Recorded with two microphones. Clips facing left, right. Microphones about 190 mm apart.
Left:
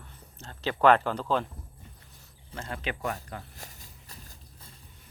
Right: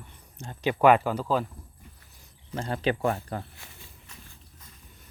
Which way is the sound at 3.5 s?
40° left (ahead or behind).